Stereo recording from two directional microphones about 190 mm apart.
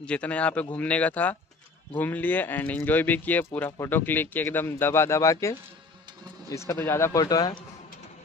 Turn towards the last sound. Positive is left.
turn(degrees=20)  # may be behind; listen again after turning